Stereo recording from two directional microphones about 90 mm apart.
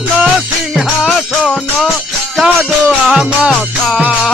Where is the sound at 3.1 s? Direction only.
5° right (ahead or behind).